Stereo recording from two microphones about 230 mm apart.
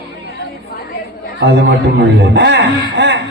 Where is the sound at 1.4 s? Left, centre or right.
Right.